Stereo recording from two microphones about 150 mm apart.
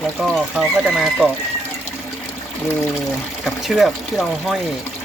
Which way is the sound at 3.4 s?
Centre (ahead or behind).